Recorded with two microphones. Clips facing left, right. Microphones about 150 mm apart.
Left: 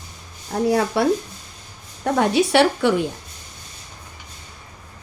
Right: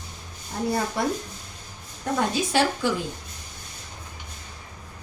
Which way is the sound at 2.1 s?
70° left (ahead or behind).